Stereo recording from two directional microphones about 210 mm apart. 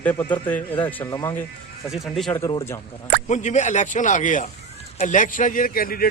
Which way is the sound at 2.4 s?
15° left (ahead or behind).